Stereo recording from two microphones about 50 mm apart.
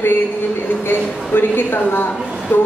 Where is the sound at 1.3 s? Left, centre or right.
Left.